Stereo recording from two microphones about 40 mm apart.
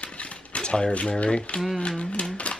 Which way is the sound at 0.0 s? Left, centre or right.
Left.